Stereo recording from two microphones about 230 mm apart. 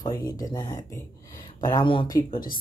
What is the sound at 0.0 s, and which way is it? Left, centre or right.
Speech, centre.